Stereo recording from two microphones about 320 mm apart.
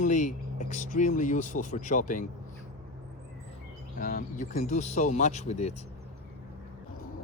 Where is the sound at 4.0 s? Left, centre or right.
Left.